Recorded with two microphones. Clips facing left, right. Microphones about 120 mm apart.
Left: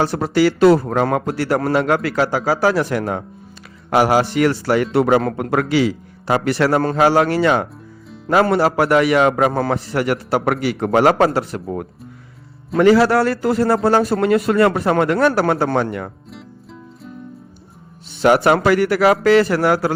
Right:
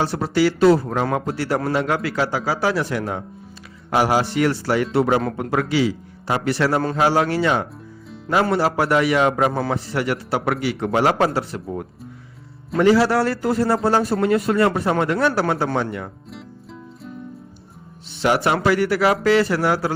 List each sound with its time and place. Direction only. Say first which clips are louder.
0.0 s a man's voice: left 3 dB; 50° left (ahead or behind)
0.6 s a man's voice: left 3 dB; 60° left (ahead or behind)
18.2 s a man's voice: left 5 dB; 50° left (ahead or behind)